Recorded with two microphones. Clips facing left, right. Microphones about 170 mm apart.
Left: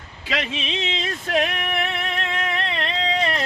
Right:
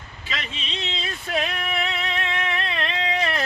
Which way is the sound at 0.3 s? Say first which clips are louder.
Left 7 dB; 85° left.